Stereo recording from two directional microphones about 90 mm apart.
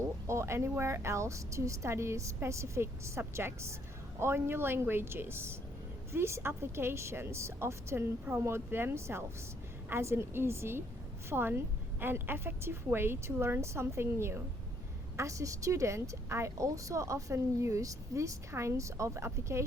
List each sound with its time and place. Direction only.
0.3 s a woman's voice: 30° right (ahead or behind)